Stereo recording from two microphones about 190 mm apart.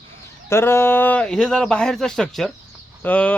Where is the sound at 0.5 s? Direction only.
10° left (ahead or behind).